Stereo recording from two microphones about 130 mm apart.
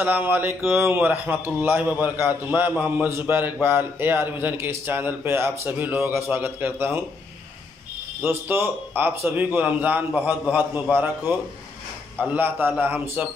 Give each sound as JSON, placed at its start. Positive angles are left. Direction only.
{"t": 0.0, "sound": "a man's voice", "side_deg": -15}
{"t": 8.2, "sound": "a man's voice", "side_deg": -15}